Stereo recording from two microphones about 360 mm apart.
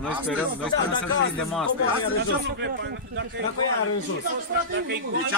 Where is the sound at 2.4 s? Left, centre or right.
Right.